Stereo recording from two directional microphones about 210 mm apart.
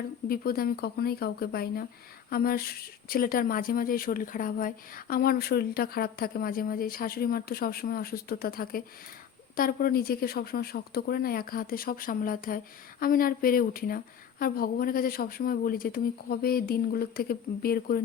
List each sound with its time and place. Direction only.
0.3 s speech: 45° left (ahead or behind)